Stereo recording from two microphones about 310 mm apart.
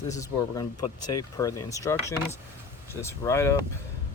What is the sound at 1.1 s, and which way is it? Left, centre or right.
Speech, centre.